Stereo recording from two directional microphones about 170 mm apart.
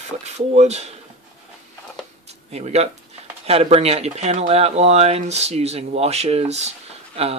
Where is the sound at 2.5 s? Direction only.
40° right (ahead or behind).